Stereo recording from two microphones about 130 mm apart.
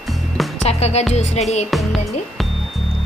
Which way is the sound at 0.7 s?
55° left (ahead or behind).